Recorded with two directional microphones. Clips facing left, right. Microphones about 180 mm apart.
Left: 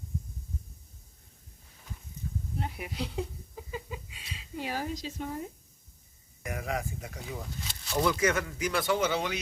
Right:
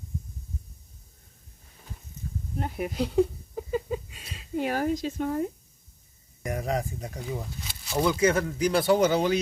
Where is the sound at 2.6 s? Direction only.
45° right (ahead or behind).